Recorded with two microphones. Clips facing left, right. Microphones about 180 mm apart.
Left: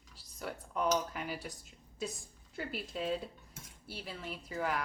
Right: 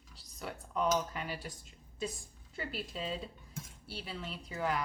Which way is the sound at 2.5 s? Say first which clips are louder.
Left 1 dB; centre (ahead or behind).